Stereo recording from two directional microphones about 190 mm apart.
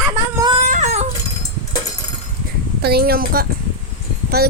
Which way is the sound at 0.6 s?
40° right (ahead or behind).